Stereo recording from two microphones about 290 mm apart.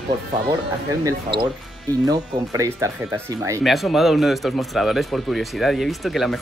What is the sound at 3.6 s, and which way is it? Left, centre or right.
Speech, centre.